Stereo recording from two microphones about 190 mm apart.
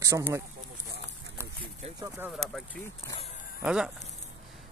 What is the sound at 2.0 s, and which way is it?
Speech, 15° right (ahead or behind).